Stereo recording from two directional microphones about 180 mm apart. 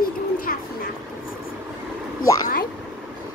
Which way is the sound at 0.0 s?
50° left (ahead or behind).